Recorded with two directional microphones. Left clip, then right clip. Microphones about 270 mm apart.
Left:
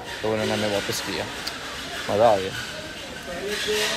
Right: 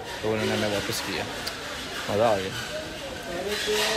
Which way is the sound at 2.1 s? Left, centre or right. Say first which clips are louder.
Left 5 dB; centre.